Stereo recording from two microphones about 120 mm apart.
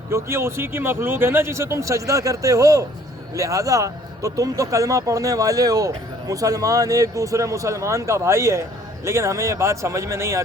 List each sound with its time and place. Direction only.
0.1 s speech: 20° right (ahead or behind)